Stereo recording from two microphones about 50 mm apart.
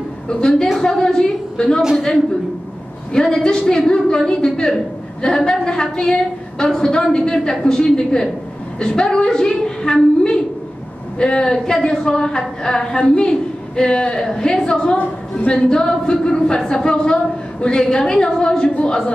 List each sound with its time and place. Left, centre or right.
0.3 s a woman's voice: centre
1.8 s a woman's voice: centre
3.1 s a woman's voice: centre